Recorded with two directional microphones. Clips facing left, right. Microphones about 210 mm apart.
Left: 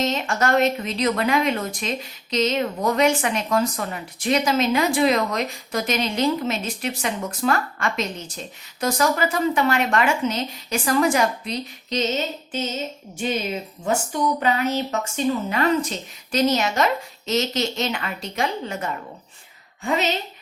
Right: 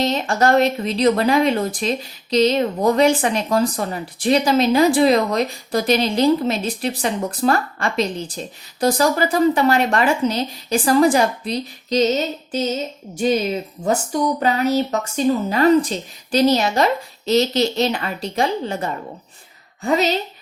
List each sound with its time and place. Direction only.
0.0 s speech: 35° right (ahead or behind)
13.8 s speech: 35° right (ahead or behind)